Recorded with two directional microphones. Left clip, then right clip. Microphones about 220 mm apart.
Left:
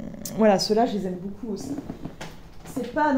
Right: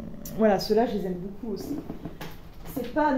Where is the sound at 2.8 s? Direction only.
40° left (ahead or behind).